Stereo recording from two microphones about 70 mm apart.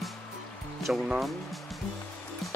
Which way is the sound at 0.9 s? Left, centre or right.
Centre.